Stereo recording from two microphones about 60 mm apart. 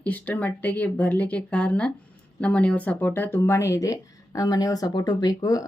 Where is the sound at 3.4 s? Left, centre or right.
Left.